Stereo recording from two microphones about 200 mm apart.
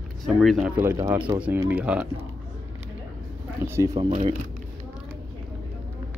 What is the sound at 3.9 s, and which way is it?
Speech, 35° right (ahead or behind).